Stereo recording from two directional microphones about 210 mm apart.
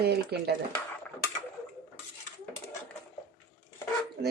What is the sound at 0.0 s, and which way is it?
Speech, 50° right (ahead or behind).